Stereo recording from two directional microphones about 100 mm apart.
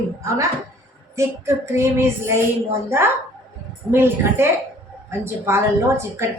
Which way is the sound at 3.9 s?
25° right (ahead or behind).